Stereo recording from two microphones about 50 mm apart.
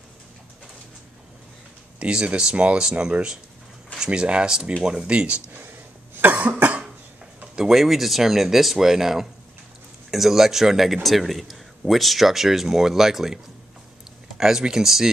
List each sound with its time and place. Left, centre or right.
2.0 s speech: right
6.2 s cough: right
7.5 s a man's voice: centre
14.4 s speech: centre